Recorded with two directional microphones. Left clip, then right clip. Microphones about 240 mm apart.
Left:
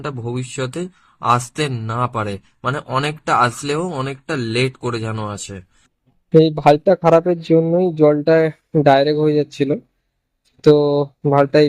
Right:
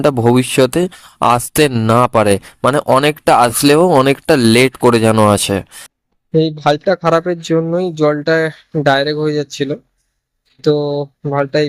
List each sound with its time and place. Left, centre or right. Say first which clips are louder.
0.0 s speech: right 15 dB; right
6.3 s speech: left 2 dB; centre